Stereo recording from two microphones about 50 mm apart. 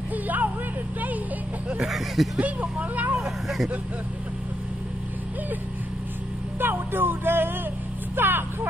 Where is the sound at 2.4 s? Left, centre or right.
Right.